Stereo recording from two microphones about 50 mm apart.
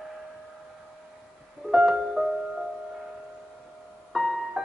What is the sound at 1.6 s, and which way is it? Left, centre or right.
Music, centre.